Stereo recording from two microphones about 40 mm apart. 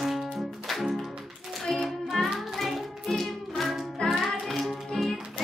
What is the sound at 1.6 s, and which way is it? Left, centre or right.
Music, centre.